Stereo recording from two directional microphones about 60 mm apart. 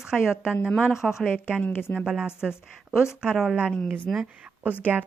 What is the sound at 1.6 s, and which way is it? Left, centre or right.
Speech, left.